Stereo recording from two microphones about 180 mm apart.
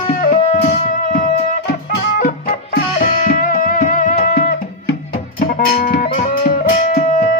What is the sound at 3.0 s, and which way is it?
Music, 50° left (ahead or behind).